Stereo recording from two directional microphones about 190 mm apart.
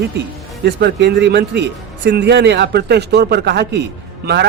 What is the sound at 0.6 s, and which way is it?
Speech, 65° right (ahead or behind).